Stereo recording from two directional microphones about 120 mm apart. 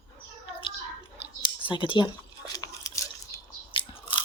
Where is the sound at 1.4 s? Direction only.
45° left (ahead or behind).